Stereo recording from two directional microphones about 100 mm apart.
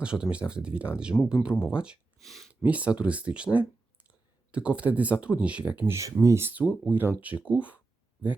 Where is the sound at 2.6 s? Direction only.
15° right (ahead or behind).